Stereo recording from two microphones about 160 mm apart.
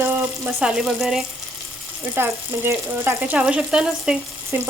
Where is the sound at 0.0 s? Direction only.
10° right (ahead or behind).